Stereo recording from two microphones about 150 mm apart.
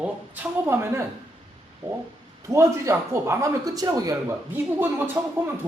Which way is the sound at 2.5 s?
20° right (ahead or behind).